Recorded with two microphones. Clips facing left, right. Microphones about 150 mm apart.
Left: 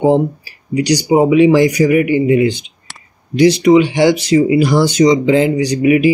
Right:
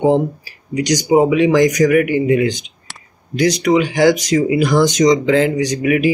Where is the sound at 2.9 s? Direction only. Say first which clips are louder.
Even; centre (ahead or behind).